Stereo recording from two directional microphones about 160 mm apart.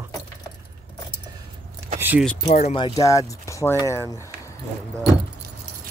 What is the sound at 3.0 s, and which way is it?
Speech, 20° left (ahead or behind).